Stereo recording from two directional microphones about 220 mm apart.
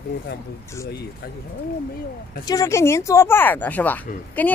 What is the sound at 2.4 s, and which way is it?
Speech, 15° left (ahead or behind).